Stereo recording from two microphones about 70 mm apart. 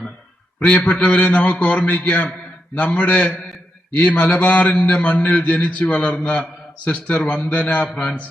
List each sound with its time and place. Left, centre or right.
0.6 s a man's voice: left